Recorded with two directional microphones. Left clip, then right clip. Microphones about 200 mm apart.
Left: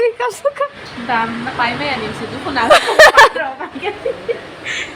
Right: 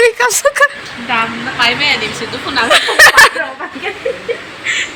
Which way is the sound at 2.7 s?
30° left (ahead or behind).